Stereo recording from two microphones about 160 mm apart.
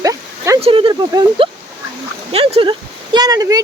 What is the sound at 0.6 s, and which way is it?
Speech, 35° right (ahead or behind).